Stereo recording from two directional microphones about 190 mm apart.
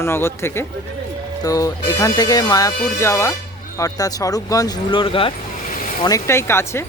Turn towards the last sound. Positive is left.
turn(degrees=15)  # may be behind; listen again after turning